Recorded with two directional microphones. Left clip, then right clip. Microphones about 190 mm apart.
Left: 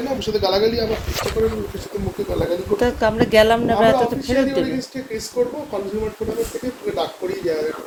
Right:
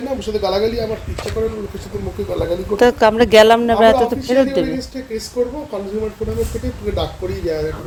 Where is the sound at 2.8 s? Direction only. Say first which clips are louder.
Right 9 dB; 40° right (ahead or behind); by 5.5 s 10° right (ahead or behind).